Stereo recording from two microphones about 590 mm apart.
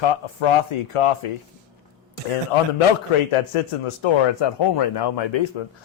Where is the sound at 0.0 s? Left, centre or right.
Left.